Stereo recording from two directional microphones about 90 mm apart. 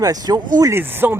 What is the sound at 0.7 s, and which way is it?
Speech, 25° right (ahead or behind).